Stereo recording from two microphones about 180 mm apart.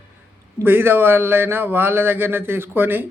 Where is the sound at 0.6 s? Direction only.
10° right (ahead or behind).